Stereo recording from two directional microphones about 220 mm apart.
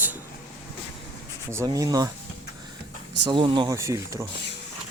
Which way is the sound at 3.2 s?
20° right (ahead or behind).